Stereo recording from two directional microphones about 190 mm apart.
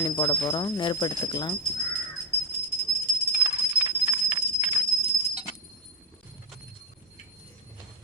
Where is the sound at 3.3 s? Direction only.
20° right (ahead or behind).